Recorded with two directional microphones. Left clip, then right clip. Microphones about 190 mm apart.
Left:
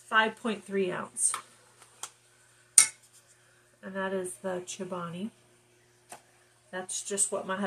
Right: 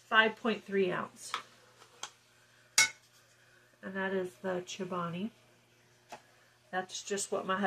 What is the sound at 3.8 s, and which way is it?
Speech, 10° right (ahead or behind).